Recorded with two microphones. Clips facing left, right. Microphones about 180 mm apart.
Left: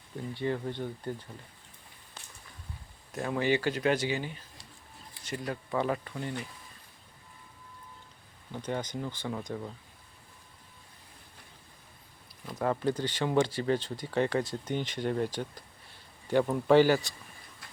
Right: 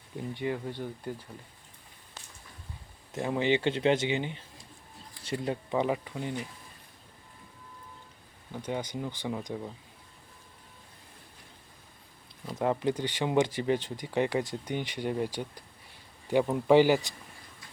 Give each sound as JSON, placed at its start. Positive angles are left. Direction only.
{"t": 0.3, "sound": "speech", "side_deg": -15}
{"t": 3.1, "sound": "speech", "side_deg": -20}
{"t": 8.5, "sound": "speech", "side_deg": -10}
{"t": 12.5, "sound": "speech", "side_deg": -20}